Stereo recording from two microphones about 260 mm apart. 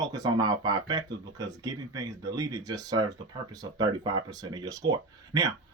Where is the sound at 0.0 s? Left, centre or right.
Centre.